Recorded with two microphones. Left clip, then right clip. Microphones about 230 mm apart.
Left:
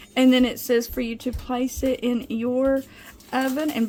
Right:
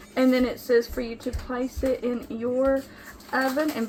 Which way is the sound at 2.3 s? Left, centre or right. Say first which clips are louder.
Left 1 dB; left.